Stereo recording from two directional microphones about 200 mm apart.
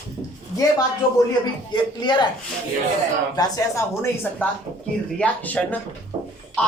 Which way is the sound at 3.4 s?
15° left (ahead or behind).